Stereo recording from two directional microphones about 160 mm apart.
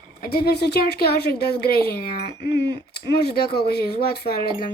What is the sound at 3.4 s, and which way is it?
Speech, 80° left.